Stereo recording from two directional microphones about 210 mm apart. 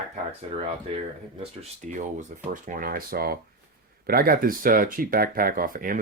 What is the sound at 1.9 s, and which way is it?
Speech, 40° right (ahead or behind).